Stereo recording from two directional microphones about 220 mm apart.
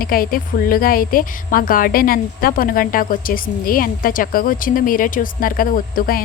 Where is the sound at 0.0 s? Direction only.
40° left (ahead or behind).